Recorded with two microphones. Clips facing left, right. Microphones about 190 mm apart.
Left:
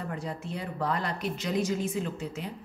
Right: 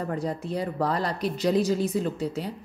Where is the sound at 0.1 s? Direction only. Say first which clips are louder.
Right 7 dB; 40° right (ahead or behind).